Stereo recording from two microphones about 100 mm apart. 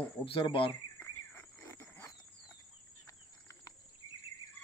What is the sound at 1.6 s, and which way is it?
Wild animals, 30° left (ahead or behind).